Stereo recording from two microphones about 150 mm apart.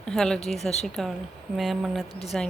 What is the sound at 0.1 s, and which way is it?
Speech, 5° left (ahead or behind).